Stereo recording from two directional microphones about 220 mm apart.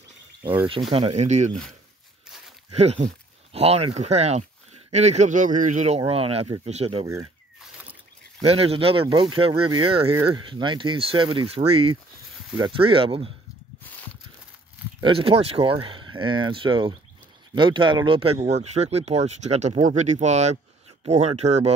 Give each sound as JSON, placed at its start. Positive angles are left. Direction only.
{"t": 0.7, "sound": "speech", "side_deg": -25}
{"t": 2.7, "sound": "speech", "side_deg": -30}
{"t": 8.4, "sound": "speech", "side_deg": -25}
{"t": 15.0, "sound": "speech", "side_deg": -25}